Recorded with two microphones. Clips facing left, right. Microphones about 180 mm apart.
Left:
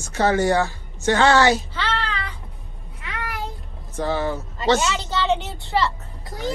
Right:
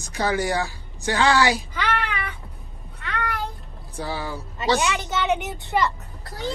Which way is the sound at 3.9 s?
10° right (ahead or behind).